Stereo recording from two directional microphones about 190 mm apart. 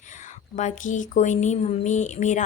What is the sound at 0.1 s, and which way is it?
Speech, 40° left (ahead or behind).